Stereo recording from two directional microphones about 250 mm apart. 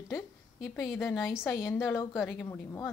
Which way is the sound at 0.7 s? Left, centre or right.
Centre.